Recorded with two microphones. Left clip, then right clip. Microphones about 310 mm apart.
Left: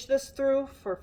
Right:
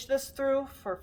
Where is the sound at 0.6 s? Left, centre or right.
Right.